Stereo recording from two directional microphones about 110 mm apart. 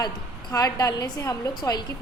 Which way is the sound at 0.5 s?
35° left (ahead or behind).